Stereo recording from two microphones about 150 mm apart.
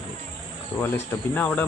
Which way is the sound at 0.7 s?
25° left (ahead or behind).